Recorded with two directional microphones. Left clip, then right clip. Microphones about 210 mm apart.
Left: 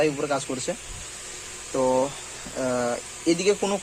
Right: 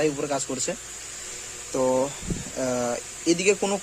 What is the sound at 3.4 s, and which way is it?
Speech, 25° right (ahead or behind).